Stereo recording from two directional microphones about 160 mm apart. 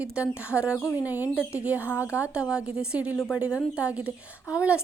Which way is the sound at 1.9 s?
15° left (ahead or behind).